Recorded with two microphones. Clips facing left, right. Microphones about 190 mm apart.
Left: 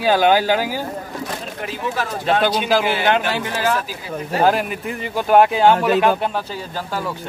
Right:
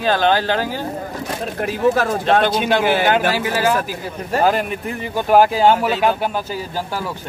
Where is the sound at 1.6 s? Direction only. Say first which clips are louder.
Right 9 dB; 50° right (ahead or behind).